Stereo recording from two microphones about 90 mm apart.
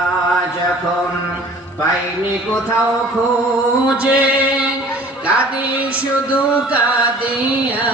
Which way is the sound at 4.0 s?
15° right (ahead or behind).